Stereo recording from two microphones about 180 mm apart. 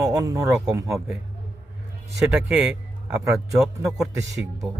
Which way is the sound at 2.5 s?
5° right (ahead or behind).